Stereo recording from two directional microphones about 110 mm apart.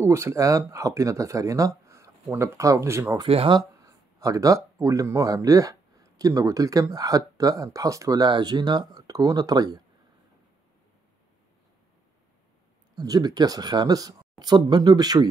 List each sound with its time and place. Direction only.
0.0 s speech: 25° right (ahead or behind)
3.3 s speech: 60° right (ahead or behind)
3.5 s speech: 30° right (ahead or behind)
12.9 s speech: 35° right (ahead or behind)